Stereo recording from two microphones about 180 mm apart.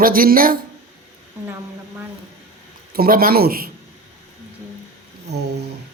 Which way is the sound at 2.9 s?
55° right (ahead or behind).